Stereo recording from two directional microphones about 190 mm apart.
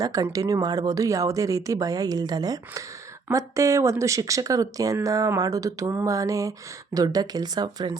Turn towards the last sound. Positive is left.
turn(degrees=-20)  # may be behind; listen again after turning